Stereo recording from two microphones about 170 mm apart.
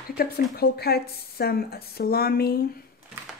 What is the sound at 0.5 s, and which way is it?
Speech, 65° left (ahead or behind).